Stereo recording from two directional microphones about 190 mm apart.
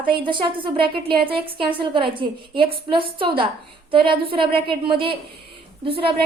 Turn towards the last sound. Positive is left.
turn(degrees=-30)  # may be behind; listen again after turning